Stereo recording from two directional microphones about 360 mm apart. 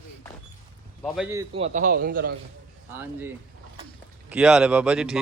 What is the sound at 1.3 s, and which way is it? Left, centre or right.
A man's voice, centre.